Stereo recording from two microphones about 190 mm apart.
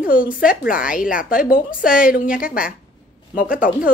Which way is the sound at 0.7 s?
45° left (ahead or behind).